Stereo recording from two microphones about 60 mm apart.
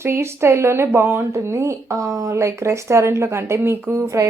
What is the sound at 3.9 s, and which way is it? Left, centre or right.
Speech, right.